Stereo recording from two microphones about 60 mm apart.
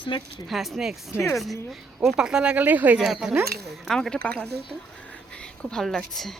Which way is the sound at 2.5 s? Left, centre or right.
Right.